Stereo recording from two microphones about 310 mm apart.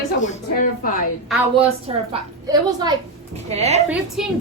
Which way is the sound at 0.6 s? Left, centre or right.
Left.